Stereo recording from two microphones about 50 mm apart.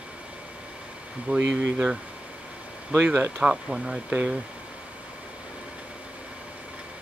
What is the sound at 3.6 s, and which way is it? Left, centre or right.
Speech, centre.